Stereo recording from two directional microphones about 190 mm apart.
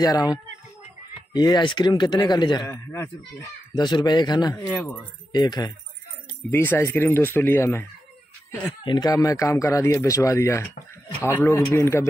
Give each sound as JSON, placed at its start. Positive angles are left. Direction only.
{"t": 0.0, "sound": "speech", "side_deg": 20}
{"t": 2.7, "sound": "speech", "side_deg": 10}
{"t": 4.6, "sound": "speech", "side_deg": 10}
{"t": 6.5, "sound": "speech", "side_deg": 10}
{"t": 8.8, "sound": "speech", "side_deg": 20}